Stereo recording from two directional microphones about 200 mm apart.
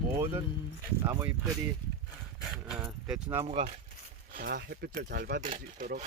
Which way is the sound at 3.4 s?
30° right (ahead or behind).